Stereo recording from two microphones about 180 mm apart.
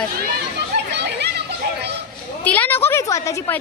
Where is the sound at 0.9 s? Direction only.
70° right (ahead or behind).